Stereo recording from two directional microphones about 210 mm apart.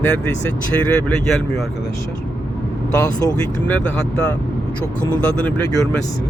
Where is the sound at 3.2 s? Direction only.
20° left (ahead or behind).